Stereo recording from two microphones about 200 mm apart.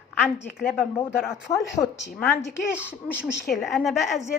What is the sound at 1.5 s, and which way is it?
A woman's voice, 15° left (ahead or behind).